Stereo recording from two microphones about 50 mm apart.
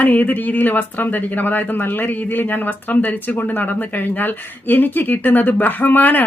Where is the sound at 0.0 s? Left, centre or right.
Left.